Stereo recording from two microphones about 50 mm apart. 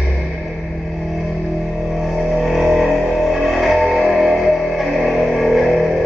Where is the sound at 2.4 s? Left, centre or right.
Centre.